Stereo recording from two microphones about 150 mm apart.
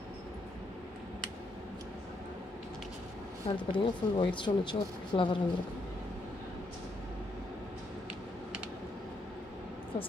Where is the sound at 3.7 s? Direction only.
35° left (ahead or behind).